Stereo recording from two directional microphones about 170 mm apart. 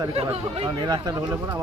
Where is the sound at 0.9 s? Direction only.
20° right (ahead or behind).